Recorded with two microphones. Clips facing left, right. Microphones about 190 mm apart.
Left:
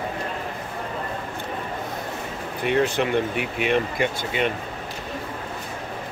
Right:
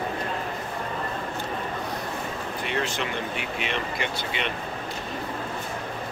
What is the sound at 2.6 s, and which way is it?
Speech, 55° left (ahead or behind).